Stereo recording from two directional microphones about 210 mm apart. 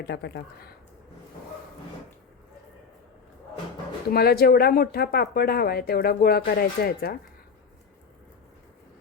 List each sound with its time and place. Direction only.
0.0 s speech: 50° left (ahead or behind)
4.1 s speech: 50° left (ahead or behind)